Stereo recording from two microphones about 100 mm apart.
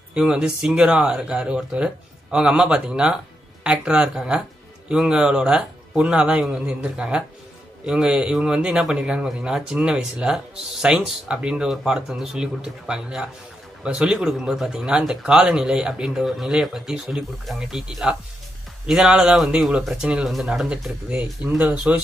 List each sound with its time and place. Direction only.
0.1 s a man's voice: 10° right (ahead or behind)